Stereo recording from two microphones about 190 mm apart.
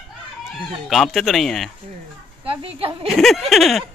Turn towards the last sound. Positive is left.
turn(degrees=0)  # may be behind; listen again after turning